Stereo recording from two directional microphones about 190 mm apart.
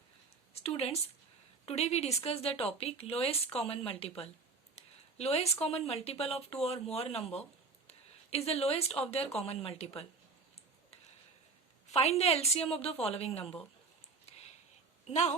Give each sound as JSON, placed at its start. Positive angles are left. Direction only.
{"t": 0.5, "sound": "speech", "side_deg": 30}
{"t": 11.9, "sound": "speech", "side_deg": 35}
{"t": 15.0, "sound": "speech", "side_deg": 35}